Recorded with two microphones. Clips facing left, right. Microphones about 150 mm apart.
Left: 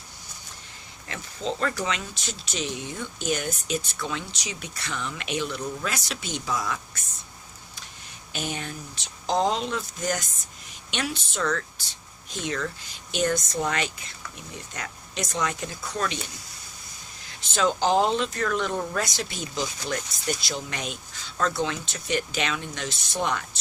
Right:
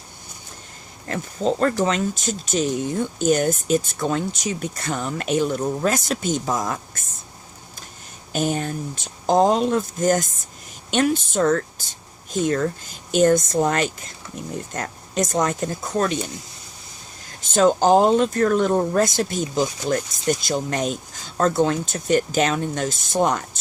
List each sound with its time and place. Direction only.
1.0 s speech: 45° right (ahead or behind)
8.3 s speech: 45° right (ahead or behind)
17.2 s speech: 45° right (ahead or behind)